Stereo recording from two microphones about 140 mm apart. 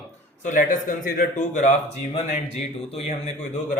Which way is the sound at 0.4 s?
70° left (ahead or behind).